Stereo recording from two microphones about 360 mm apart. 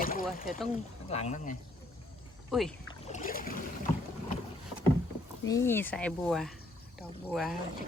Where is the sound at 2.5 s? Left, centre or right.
Centre.